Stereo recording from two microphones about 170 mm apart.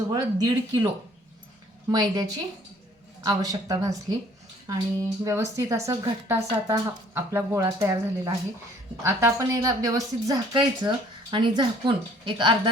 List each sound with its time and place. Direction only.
0.1 s a woman's voice: 25° right (ahead or behind)
1.9 s a woman's voice: 20° right (ahead or behind)